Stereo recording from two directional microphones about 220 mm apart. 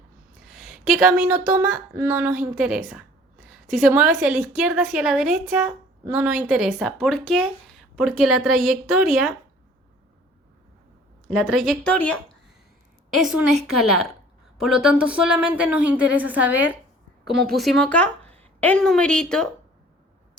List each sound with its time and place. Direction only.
0.4 s a woman's voice: centre (ahead or behind)
11.3 s a woman's voice: centre (ahead or behind)